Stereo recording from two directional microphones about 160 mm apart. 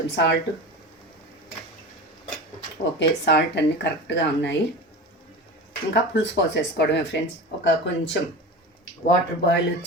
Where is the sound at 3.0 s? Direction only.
90° left.